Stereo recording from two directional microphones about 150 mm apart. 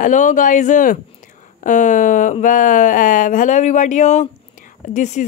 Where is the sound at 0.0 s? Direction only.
60° left (ahead or behind).